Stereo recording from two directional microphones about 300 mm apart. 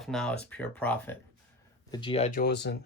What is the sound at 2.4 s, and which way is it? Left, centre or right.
Speech, left.